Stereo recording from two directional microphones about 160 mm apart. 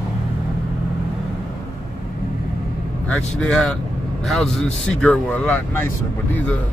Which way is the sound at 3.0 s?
5° left (ahead or behind).